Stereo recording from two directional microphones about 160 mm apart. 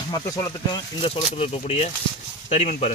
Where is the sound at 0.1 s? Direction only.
25° left (ahead or behind).